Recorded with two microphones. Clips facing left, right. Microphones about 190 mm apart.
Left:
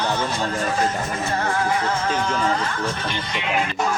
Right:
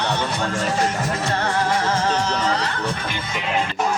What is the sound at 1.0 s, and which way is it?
Music, 75° right (ahead or behind).